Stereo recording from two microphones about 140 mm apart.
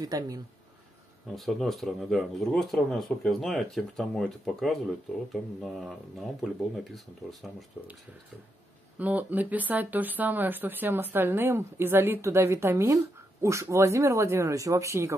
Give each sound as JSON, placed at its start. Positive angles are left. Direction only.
{"t": 0.0, "sound": "speech", "side_deg": -25}
{"t": 1.3, "sound": "speech", "side_deg": 0}
{"t": 8.9, "sound": "speech", "side_deg": -10}